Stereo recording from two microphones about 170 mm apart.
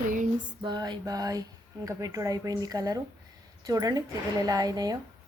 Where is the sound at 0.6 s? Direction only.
25° right (ahead or behind).